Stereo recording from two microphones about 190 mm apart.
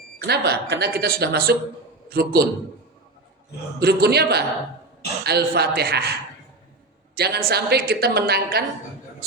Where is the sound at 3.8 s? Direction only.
55° right (ahead or behind).